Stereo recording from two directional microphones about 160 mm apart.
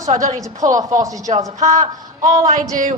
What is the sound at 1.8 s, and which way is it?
Speech, 25° right (ahead or behind).